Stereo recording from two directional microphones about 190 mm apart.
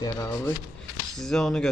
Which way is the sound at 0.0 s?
15° left (ahead or behind).